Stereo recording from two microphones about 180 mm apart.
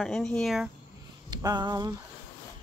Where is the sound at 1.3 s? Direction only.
25° right (ahead or behind).